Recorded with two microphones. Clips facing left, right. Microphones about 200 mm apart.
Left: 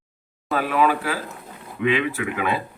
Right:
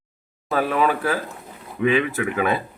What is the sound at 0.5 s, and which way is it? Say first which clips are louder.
Speech: even; 40° right (ahead or behind).